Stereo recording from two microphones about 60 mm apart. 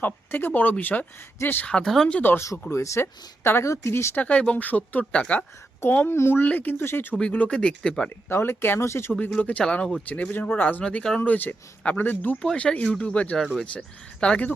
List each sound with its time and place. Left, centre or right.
0.0 s speech: left
1.6 s speech: centre
2.3 s speech: left
3.6 s speech: left
4.1 s speech: left
5.8 s speech: left
6.4 s speech: left
7.2 s speech: left
8.3 s speech: left
9.4 s speech: left
11.8 s speech: left
13.3 s speech: centre
13.7 s speech: centre